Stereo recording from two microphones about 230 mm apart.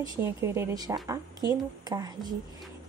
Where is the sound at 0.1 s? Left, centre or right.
Centre.